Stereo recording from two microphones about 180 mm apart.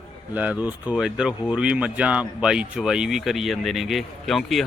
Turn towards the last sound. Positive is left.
turn(degrees=0)  # may be behind; listen again after turning